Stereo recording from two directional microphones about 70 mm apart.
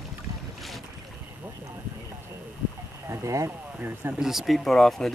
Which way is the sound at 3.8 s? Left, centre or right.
Right.